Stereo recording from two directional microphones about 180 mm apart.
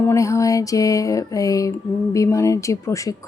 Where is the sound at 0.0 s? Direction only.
15° left (ahead or behind).